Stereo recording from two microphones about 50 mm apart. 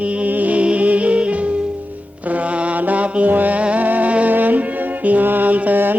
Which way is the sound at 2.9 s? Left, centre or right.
Right.